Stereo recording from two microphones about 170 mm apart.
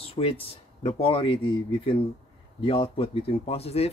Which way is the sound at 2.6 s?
35° left (ahead or behind).